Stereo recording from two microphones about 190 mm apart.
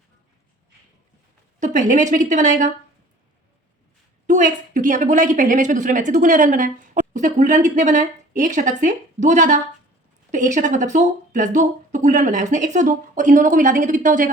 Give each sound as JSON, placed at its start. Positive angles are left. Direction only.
{"t": 1.5, "sound": "speech", "side_deg": -40}
{"t": 4.3, "sound": "speech", "side_deg": -40}